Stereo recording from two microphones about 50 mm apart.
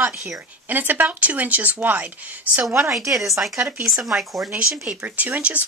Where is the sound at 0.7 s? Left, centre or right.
Right.